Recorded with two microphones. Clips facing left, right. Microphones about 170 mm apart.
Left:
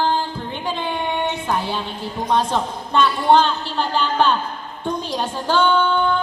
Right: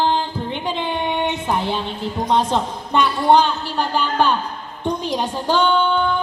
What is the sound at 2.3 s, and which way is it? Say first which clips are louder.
A woman's voice: right 1 dB; 15° right (ahead or behind).